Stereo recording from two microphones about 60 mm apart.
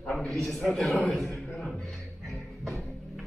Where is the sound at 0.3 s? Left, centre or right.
Centre.